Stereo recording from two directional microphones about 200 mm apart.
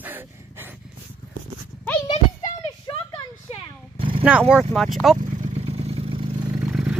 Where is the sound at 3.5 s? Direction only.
30° left (ahead or behind).